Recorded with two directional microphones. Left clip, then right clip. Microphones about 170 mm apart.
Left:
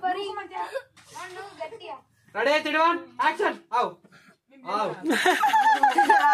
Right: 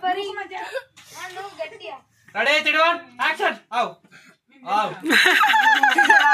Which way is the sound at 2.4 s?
25° left (ahead or behind).